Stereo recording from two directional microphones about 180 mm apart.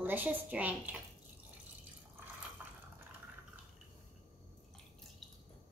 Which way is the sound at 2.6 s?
10° right (ahead or behind).